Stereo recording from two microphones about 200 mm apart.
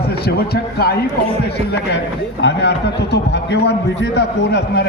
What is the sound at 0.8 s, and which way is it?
Speech, 50° left (ahead or behind).